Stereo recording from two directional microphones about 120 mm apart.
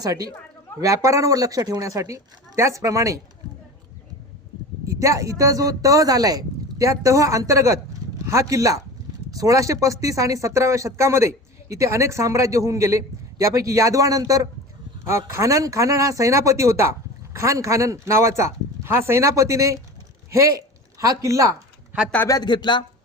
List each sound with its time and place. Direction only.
0.0 s a woman's voice: 30° right (ahead or behind)
4.9 s speech: 25° right (ahead or behind)
22.3 s speech: 35° left (ahead or behind)